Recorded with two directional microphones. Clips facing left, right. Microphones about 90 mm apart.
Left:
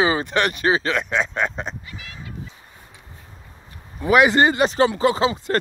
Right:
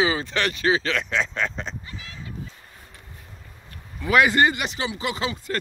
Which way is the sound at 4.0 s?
25° left (ahead or behind).